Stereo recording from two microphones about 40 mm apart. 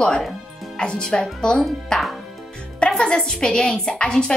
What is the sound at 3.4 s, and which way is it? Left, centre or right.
Speech, centre.